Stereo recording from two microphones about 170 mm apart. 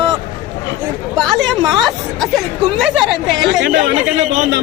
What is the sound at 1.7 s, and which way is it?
Speech, centre (ahead or behind).